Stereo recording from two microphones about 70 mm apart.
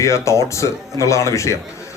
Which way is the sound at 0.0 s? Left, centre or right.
Left.